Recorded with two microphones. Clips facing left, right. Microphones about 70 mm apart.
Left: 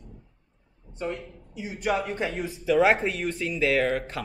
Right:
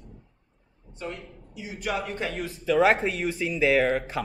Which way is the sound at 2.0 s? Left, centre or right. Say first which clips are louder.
Left 2 dB; centre.